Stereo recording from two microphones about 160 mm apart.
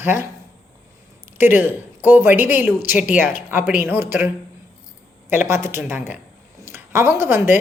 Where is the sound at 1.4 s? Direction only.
15° right (ahead or behind).